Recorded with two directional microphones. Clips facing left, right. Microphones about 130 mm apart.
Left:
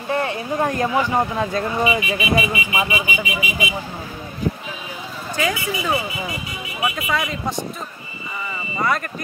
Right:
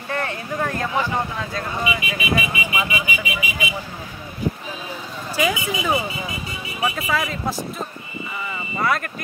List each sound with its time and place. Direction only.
0.1 s a sound: 20° left (ahead or behind)
0.6 s speech: 20° left (ahead or behind)
5.3 s speech: 15° right (ahead or behind)
7.1 s speech: centre (ahead or behind)
8.8 s speech: centre (ahead or behind)